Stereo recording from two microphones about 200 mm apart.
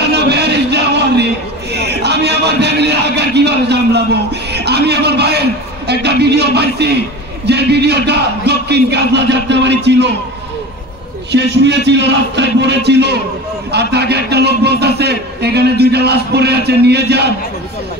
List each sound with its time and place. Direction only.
0.1 s a sound: 55° right (ahead or behind)
1.7 s music: 55° right (ahead or behind)
7.4 s a man's voice: 55° right (ahead or behind)
11.3 s a man's voice: 60° right (ahead or behind)